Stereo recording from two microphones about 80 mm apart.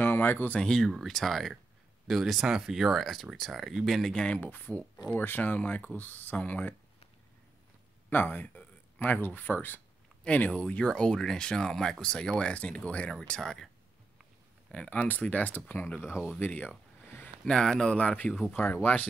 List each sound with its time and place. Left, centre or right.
0.0 s speech: left
0.6 s speech: centre
4.4 s speech: left
8.1 s speech: left
13.4 s speech: centre
14.7 s speech: centre; by 16.3 s left
16.3 s a sound: left
17.5 s speech: centre